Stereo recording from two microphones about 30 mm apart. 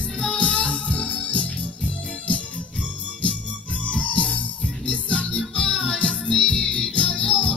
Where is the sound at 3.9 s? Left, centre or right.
Left.